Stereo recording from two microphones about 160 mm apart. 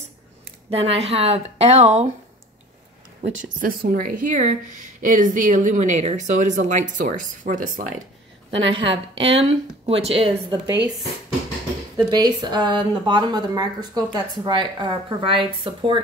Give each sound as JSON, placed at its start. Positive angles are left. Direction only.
{"t": 0.7, "sound": "speech", "side_deg": -40}
{"t": 3.2, "sound": "a woman's voice", "side_deg": -60}
{"t": 8.5, "sound": "speech", "side_deg": -30}
{"t": 12.0, "sound": "speech", "side_deg": -25}